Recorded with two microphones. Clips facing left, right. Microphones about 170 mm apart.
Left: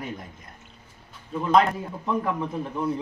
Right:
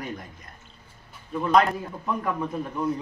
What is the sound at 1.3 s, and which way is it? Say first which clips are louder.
A man's voice: even; 25° left (ahead or behind).